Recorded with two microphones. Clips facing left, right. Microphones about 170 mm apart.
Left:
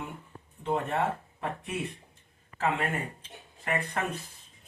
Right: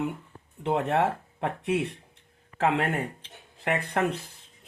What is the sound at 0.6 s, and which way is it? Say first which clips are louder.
Speech: right 4 dB; 75° right (ahead or behind).